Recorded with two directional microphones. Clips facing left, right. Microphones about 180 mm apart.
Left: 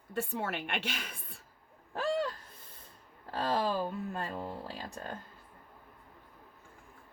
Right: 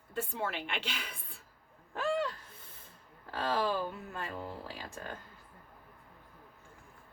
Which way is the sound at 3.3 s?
35° left (ahead or behind).